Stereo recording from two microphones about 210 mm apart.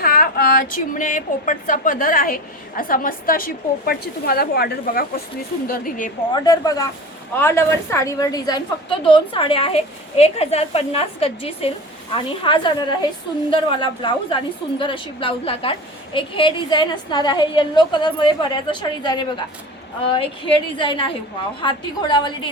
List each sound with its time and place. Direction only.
0.0 s a woman's voice: 45° left (ahead or behind)
6.3 s a woman's voice: 20° left (ahead or behind)